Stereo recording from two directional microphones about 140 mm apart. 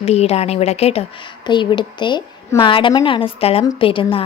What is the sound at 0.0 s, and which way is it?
Speech, 50° left (ahead or behind).